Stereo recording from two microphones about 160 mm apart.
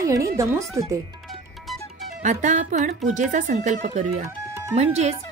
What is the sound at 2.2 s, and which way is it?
Speech, 50° right (ahead or behind).